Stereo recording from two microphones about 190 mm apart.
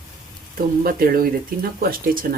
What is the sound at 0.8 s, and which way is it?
Speech, 50° right (ahead or behind).